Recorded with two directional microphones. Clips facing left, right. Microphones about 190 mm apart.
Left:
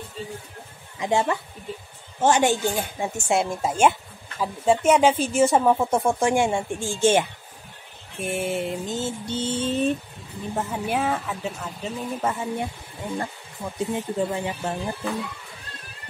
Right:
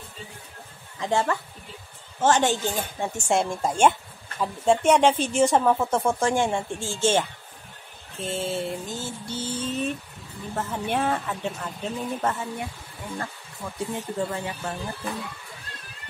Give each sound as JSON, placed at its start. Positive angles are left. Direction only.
{"t": 0.9, "sound": "speech", "side_deg": 15}
{"t": 8.2, "sound": "mantra", "side_deg": 15}
{"t": 10.5, "sound": "a woman's voice", "side_deg": 10}
{"t": 12.5, "sound": "speech", "side_deg": 20}